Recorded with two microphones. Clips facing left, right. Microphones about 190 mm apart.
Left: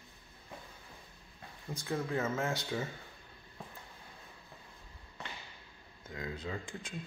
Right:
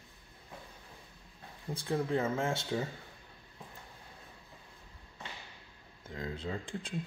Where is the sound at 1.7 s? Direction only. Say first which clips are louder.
Right 3 dB; 30° right (ahead or behind).